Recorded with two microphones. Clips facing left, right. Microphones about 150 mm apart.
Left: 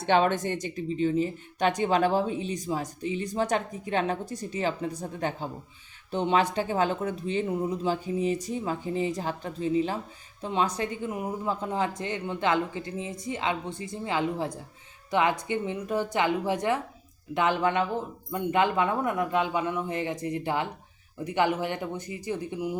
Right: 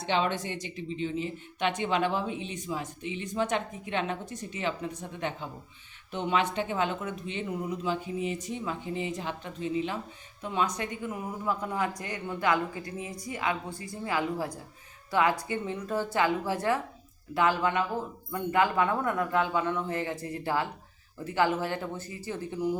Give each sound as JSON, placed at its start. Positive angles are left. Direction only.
{"t": 0.0, "sound": "a woman's voice", "side_deg": 50}